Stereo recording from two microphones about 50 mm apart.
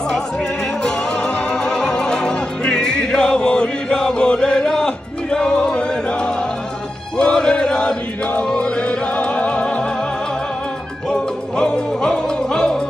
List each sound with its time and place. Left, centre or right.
0.1 s music: centre
7.2 s chant: centre
8.5 s music: left
11.1 s music: centre